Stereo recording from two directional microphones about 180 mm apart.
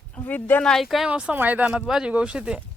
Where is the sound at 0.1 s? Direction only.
10° left (ahead or behind).